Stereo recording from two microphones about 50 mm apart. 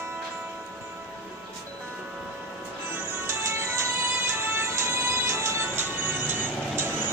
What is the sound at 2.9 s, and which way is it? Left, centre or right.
Music, right.